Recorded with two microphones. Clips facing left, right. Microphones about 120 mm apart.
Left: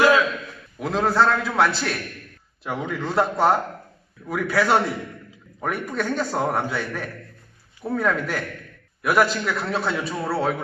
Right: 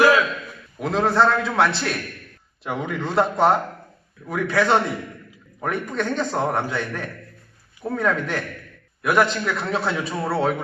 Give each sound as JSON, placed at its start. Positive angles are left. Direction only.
{"t": 0.8, "sound": "a man's voice", "side_deg": 0}